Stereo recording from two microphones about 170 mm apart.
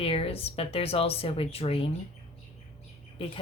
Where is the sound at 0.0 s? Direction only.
35° left (ahead or behind).